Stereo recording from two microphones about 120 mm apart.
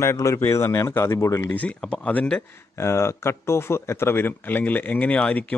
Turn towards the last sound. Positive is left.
turn(degrees=10)  # may be behind; listen again after turning